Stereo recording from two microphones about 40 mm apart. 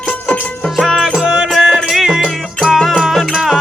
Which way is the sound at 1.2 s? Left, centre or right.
Right.